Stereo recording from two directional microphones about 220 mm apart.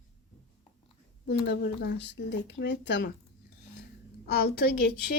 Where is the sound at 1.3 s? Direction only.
50° left (ahead or behind).